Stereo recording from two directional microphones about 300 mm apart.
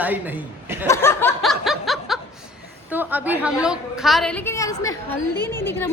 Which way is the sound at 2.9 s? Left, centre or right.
Centre.